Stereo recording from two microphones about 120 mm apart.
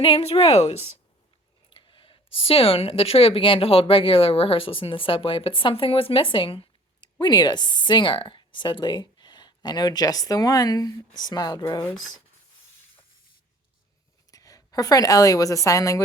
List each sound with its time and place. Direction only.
0.0 s a woman's voice: 50° left (ahead or behind)
1.7 s speech: 45° left (ahead or behind)
14.3 s a woman's voice: 30° left (ahead or behind)